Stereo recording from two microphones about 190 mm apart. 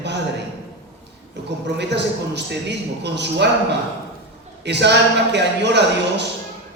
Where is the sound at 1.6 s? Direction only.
65° right (ahead or behind).